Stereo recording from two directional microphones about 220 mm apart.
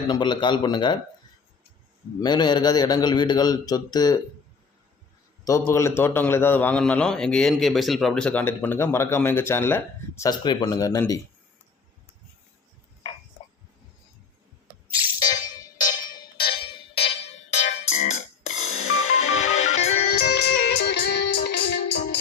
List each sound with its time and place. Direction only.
0.1 s speech: 20° left (ahead or behind)
2.2 s a man's voice: 20° left (ahead or behind)
5.5 s a man's voice: 15° left (ahead or behind)
15.2 s music: 15° left (ahead or behind)
20.1 s music: 45° left (ahead or behind)